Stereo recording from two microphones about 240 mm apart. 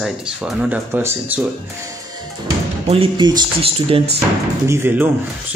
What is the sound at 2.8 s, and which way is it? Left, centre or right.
Speech, right.